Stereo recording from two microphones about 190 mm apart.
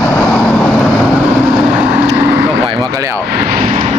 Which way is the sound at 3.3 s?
55° right (ahead or behind).